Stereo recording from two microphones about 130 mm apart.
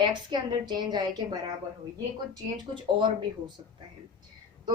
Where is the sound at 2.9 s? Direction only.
40° right (ahead or behind).